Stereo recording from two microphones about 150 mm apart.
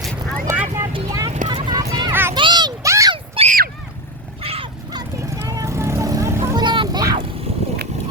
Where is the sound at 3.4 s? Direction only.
40° right (ahead or behind).